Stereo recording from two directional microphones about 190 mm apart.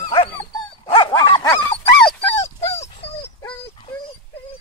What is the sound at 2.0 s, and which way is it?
Dog, 10° left (ahead or behind).